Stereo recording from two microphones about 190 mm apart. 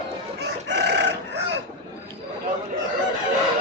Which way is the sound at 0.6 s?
65° right (ahead or behind).